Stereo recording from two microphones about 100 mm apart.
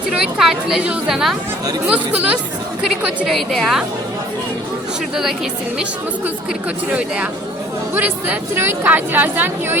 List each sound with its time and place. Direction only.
0.1 s speech: 5° right (ahead or behind)
3.2 s speech: centre (ahead or behind)
7.9 s a woman's voice: 20° right (ahead or behind)